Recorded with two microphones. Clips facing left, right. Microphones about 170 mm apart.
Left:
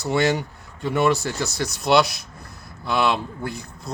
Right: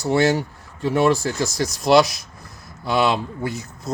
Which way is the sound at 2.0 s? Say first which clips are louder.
Even; 60° left (ahead or behind).